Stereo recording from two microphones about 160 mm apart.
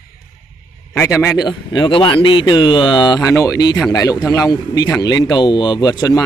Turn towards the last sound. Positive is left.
turn(degrees=25)  # may be behind; listen again after turning